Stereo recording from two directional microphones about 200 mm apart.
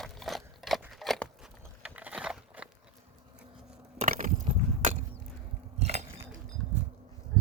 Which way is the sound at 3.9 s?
40° right (ahead or behind).